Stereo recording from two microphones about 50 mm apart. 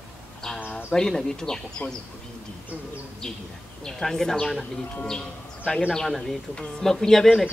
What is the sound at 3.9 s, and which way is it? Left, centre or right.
A man's voice, centre.